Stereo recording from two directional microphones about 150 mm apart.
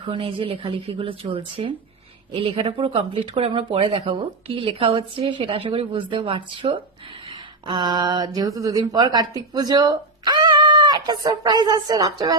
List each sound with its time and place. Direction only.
0.0 s speech: 40° right (ahead or behind)